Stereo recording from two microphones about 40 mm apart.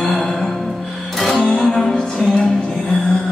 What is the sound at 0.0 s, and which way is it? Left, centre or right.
Music, centre.